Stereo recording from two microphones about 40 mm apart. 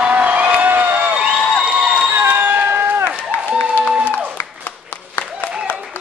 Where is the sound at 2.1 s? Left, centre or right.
Right.